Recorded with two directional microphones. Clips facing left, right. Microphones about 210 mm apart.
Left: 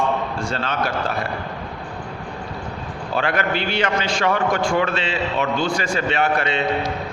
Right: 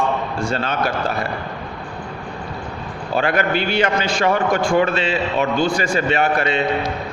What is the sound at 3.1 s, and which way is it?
Speech, 45° right (ahead or behind).